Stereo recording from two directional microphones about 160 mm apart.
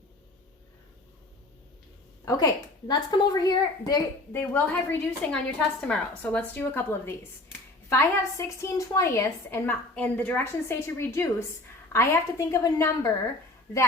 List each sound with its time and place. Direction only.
2.2 s a woman's voice: 25° left (ahead or behind)